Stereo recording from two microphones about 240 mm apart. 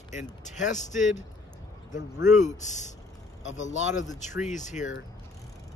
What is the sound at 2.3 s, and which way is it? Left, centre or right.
Speech, left.